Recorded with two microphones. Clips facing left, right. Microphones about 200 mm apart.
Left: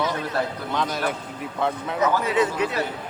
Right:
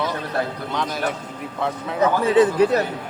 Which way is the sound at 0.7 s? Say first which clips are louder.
Right 1 dB; centre (ahead or behind).